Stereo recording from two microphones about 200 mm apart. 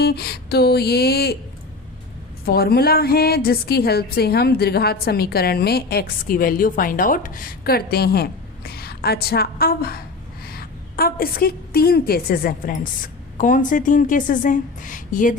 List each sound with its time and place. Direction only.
0.0 s a woman's voice: 50° left (ahead or behind)
2.5 s a woman's voice: 50° left (ahead or behind)